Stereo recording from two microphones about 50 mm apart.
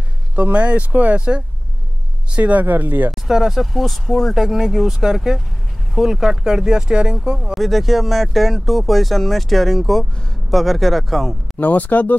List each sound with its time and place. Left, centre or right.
0.4 s speech: right
2.3 s speech: right
3.1 s speech: centre
3.7 s speech: centre
7.5 s speech: centre
11.5 s speech: left